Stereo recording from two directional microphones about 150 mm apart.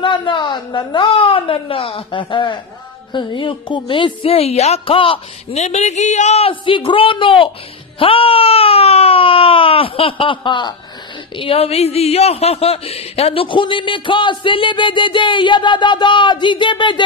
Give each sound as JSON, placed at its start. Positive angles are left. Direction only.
{"t": 0.0, "sound": "speech", "side_deg": 30}